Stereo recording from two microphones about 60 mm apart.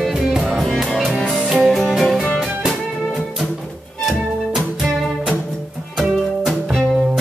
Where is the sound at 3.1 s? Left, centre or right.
Centre.